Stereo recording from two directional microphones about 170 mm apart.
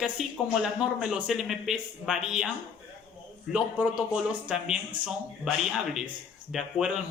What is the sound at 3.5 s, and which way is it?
Speech, 5° right (ahead or behind).